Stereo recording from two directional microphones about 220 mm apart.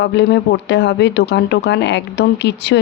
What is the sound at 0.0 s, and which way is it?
Speech, 50° left (ahead or behind).